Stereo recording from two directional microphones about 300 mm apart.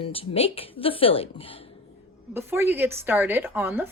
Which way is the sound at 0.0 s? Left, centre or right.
Centre.